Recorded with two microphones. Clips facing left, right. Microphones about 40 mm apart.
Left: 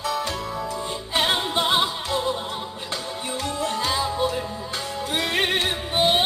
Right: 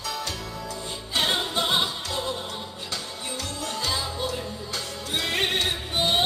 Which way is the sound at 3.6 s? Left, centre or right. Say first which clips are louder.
Left 5 dB; left.